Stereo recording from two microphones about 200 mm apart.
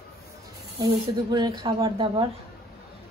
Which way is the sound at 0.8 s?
20° right (ahead or behind).